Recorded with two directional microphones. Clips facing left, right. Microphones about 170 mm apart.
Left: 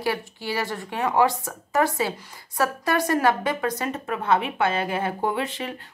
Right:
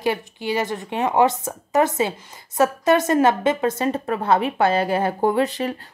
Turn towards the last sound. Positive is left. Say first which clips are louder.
# right 7 dB
turn(degrees=-40)  # may be behind; listen again after turning